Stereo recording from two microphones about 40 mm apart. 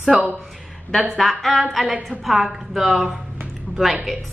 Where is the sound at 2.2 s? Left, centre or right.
Centre.